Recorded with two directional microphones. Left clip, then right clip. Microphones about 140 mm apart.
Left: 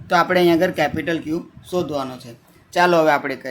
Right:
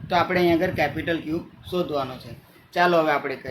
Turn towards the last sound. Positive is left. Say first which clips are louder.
# left 4 dB
turn(degrees=85)